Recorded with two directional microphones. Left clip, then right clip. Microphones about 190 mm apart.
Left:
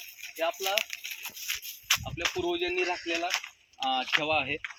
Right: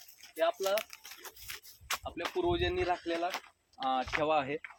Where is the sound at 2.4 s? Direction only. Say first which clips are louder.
Right 2 dB; 25° right (ahead or behind).